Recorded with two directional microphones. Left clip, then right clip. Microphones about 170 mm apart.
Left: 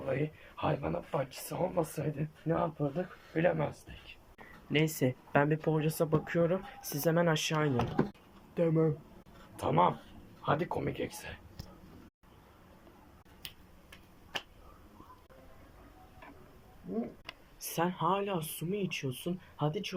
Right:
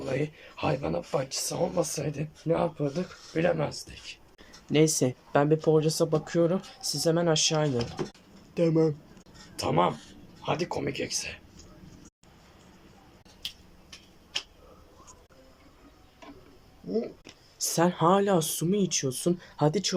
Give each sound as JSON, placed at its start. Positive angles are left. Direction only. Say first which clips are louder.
{"t": 0.0, "sound": "speech", "louder": "right 4 dB", "side_deg": -20}
{"t": 17.6, "sound": "a sound", "louder": "right 8 dB", "side_deg": -25}
{"t": 17.9, "sound": "speech", "louder": "right 11 dB", "side_deg": -35}